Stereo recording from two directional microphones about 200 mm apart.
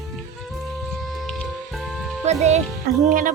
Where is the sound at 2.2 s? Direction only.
35° right (ahead or behind).